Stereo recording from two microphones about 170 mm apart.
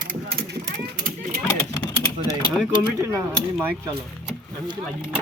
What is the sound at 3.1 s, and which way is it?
Speech, 15° right (ahead or behind).